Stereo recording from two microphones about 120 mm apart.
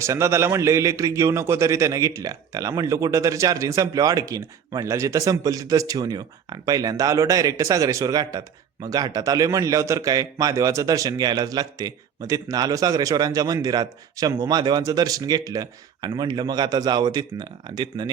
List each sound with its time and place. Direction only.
0.0 s a man's voice: 25° right (ahead or behind)